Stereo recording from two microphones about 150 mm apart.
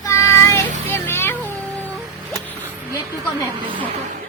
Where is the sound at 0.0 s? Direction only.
20° left (ahead or behind).